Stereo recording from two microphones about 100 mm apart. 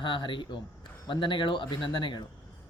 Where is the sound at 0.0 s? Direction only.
50° left (ahead or behind).